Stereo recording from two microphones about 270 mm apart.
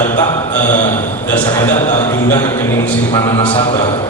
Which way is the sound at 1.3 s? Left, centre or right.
Centre.